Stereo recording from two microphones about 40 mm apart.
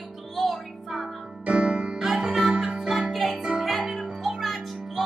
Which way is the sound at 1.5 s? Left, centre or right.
Right.